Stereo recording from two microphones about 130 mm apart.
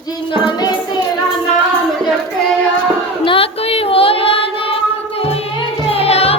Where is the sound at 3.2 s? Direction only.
45° left (ahead or behind).